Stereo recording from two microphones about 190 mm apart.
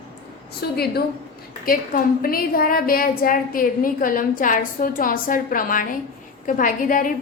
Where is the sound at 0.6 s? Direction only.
55° left (ahead or behind).